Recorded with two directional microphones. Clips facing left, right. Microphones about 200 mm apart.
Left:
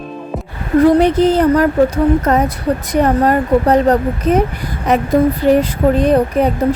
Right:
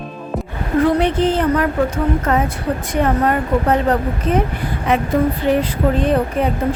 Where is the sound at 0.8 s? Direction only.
40° left (ahead or behind).